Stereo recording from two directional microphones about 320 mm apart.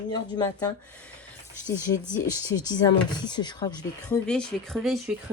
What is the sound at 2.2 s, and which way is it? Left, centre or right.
Speech, centre.